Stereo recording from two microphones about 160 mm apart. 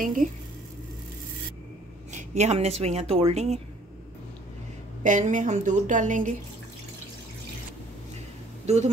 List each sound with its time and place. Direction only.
0.0 s speech: 55° right (ahead or behind)
2.1 s speech: 45° right (ahead or behind)
5.0 s speech: 50° right (ahead or behind)
8.6 s speech: 45° right (ahead or behind)